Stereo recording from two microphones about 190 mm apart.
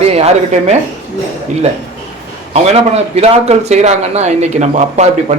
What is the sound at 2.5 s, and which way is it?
A man's voice, 35° right (ahead or behind).